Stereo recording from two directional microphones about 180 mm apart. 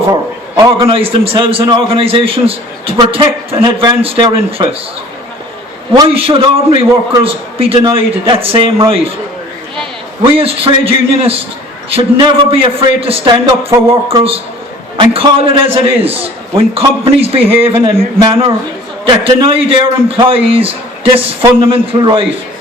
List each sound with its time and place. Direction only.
0.1 s a man's voice: 30° right (ahead or behind)
5.9 s a man's voice: 30° right (ahead or behind)
10.3 s a man's voice: 30° right (ahead or behind)